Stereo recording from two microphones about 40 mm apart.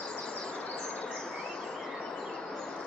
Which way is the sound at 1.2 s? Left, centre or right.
Centre.